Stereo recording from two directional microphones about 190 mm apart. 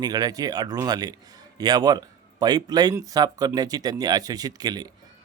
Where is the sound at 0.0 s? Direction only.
20° right (ahead or behind).